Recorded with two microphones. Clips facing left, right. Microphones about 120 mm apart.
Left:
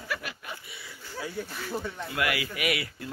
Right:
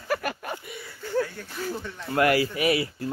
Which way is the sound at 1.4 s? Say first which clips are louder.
Left 6 dB; 10° left (ahead or behind).